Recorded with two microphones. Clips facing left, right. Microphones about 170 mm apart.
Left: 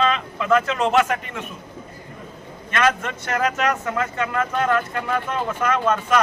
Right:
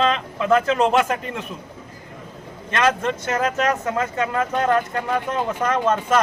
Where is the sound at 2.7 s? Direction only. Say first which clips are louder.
Right 1 dB; 30° right (ahead or behind).